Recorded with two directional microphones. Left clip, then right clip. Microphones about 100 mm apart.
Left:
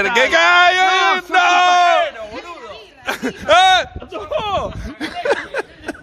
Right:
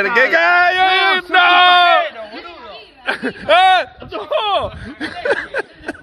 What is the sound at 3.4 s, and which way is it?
Speech, 20° left (ahead or behind).